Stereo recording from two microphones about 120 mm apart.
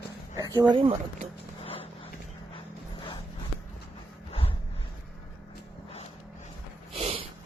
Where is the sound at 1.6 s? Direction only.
50° left (ahead or behind).